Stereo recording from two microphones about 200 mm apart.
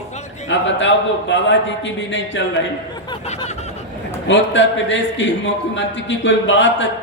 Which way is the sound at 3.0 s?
20° left (ahead or behind).